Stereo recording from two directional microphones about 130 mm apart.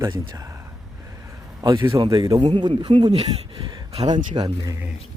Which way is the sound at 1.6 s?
30° right (ahead or behind).